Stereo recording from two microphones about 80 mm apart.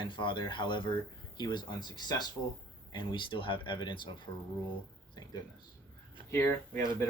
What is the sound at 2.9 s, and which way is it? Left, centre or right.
Speech, left.